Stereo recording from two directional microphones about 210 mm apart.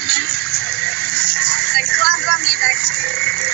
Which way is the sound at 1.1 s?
75° right (ahead or behind).